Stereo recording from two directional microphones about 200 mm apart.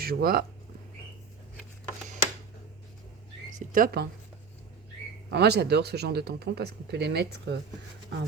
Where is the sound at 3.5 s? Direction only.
45° right (ahead or behind).